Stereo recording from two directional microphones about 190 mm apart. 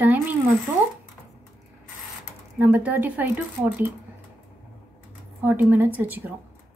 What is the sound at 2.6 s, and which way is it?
Speech, 10° right (ahead or behind).